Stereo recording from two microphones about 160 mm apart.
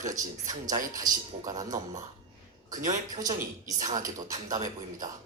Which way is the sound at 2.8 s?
50° right (ahead or behind).